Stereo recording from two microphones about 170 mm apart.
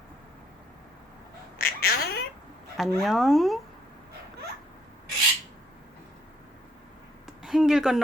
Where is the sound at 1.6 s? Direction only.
60° left (ahead or behind).